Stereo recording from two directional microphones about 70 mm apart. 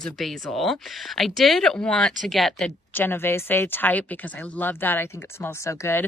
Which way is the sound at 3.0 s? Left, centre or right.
Left.